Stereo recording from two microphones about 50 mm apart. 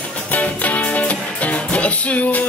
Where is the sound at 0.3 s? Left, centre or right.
Left.